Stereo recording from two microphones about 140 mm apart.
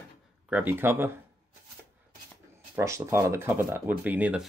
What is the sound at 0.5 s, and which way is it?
Speech, 10° right (ahead or behind).